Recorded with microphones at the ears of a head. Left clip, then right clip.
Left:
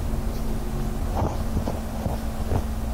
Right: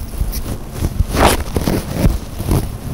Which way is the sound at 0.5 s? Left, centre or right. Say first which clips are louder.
Right 5 dB; right.